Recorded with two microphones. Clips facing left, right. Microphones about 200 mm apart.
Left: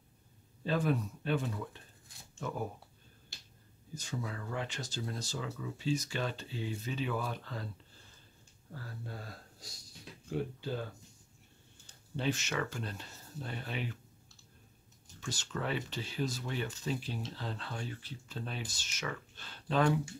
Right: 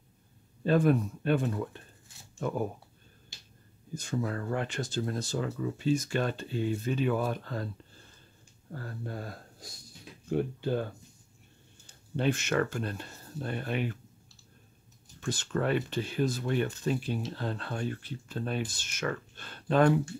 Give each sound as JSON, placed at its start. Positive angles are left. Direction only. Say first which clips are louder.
{"t": 0.7, "sound": "speech", "louder": "right 7 dB", "side_deg": -55}
{"t": 3.9, "sound": "speech", "louder": "right 8 dB", "side_deg": -55}
{"t": 8.7, "sound": "speech", "louder": "right 7 dB", "side_deg": -55}
{"t": 12.2, "sound": "speech", "louder": "right 7 dB", "side_deg": -55}
{"t": 15.1, "sound": "speech", "louder": "right 8 dB", "side_deg": -55}